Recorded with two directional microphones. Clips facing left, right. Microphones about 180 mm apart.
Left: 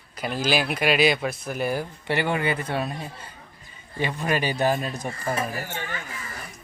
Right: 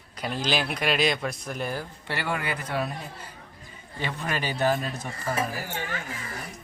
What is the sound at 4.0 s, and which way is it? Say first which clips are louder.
Speech: left 5 dB; 15° left (ahead or behind).